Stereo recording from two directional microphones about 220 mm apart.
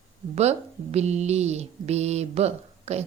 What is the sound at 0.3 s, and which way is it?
A woman's voice, 30° right (ahead or behind).